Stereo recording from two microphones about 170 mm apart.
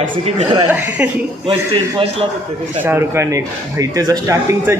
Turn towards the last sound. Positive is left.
turn(degrees=-15)  # may be behind; listen again after turning